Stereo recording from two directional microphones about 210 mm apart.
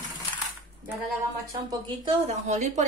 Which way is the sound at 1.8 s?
35° right (ahead or behind).